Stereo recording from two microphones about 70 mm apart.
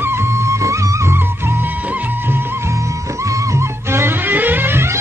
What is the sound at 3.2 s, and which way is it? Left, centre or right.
Music, right.